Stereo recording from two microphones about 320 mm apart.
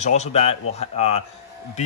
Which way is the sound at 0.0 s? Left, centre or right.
Left.